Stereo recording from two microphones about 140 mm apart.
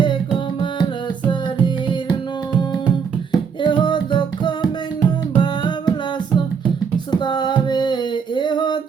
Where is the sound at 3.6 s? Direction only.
35° left (ahead or behind).